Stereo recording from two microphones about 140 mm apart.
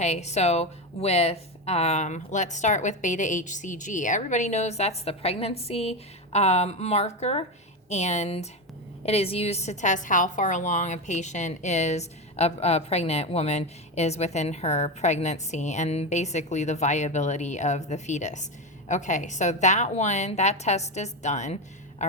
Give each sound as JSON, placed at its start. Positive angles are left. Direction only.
{"t": 0.0, "sound": "a woman's voice", "side_deg": 55}